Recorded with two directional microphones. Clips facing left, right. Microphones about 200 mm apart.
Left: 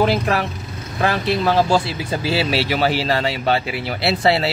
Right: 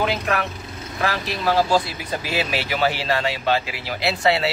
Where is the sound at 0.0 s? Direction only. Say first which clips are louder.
Left 5 dB; 30° left (ahead or behind).